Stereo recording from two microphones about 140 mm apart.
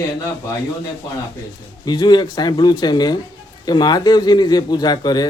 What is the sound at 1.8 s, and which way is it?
Speech, 30° left (ahead or behind).